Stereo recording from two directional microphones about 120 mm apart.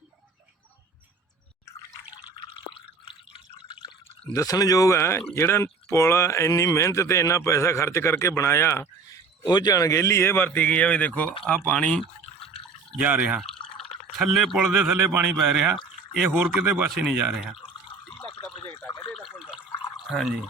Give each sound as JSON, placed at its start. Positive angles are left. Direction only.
{"t": 4.3, "sound": "speech", "side_deg": 30}
{"t": 9.5, "sound": "speech", "side_deg": 35}
{"t": 13.0, "sound": "speech", "side_deg": -10}
{"t": 16.1, "sound": "speech", "side_deg": -5}
{"t": 19.1, "sound": "water", "side_deg": -5}
{"t": 20.1, "sound": "speech", "side_deg": -5}